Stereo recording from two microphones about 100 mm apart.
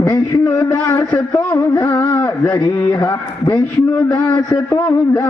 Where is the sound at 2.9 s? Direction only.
40° left (ahead or behind).